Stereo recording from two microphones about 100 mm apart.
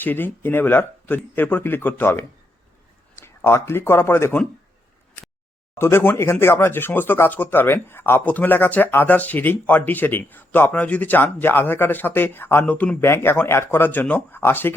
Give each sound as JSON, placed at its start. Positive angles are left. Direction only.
{"t": 0.0, "sound": "speech", "side_deg": 20}
{"t": 5.8, "sound": "speech", "side_deg": 25}